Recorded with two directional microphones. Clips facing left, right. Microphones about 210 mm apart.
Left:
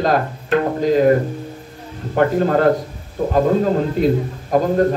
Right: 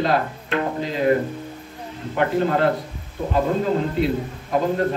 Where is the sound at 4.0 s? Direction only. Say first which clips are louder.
Left 5 dB; 40° left (ahead or behind).